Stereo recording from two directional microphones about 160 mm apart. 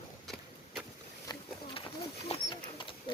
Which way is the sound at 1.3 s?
35° left (ahead or behind).